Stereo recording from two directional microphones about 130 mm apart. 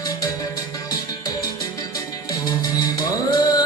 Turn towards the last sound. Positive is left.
turn(degrees=30)  # may be behind; listen again after turning